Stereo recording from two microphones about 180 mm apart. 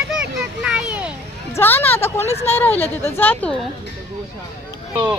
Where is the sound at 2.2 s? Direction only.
35° left (ahead or behind).